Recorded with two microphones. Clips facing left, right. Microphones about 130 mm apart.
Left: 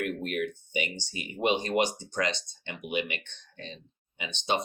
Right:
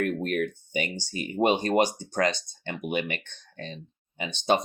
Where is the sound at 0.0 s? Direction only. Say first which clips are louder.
Right 4 dB; 40° right (ahead or behind).